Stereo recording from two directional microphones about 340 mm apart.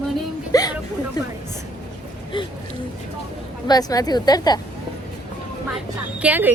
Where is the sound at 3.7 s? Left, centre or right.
Centre.